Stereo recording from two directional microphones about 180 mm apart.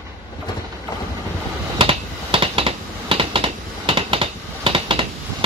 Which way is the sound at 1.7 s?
30° right (ahead or behind).